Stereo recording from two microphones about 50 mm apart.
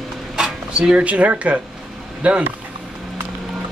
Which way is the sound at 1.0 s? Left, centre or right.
Right.